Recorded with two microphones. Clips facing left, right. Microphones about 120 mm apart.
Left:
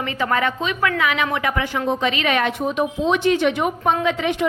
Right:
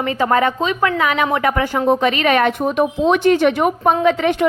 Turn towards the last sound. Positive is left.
turn(degrees=-50)  # may be behind; listen again after turning